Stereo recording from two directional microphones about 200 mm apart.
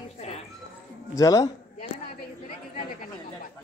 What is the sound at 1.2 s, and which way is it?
Speech, 15° left (ahead or behind).